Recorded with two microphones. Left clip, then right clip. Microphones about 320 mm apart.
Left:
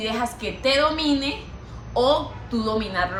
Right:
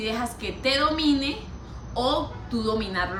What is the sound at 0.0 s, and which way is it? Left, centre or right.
A woman's voice, centre.